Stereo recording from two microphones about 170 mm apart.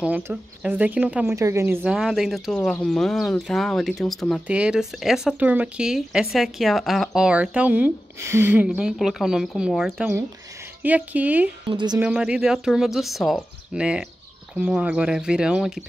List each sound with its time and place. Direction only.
0.0 s speech: 5° right (ahead or behind)
11.7 s speech: 25° right (ahead or behind)
12.0 s speech: 5° right (ahead or behind)